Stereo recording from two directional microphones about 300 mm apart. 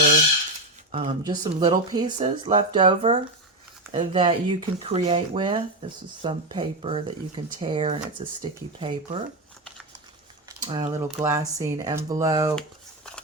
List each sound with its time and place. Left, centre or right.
0.9 s speech: centre
10.6 s speech: centre